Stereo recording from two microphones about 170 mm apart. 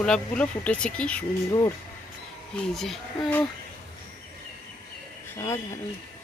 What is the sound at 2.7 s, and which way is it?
Speech, centre (ahead or behind).